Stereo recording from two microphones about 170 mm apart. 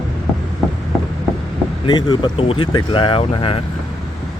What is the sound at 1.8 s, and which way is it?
Speech, 25° left (ahead or behind).